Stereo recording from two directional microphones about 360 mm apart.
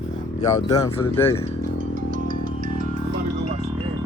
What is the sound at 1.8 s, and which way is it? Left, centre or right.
Music, right.